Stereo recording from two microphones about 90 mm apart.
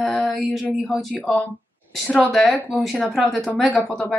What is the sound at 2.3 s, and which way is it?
A woman's voice, centre (ahead or behind).